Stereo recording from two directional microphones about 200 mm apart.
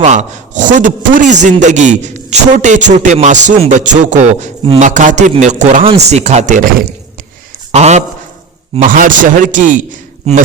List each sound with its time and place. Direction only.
0.0 s a man's voice: 35° right (ahead or behind)
7.7 s a man's voice: 35° right (ahead or behind)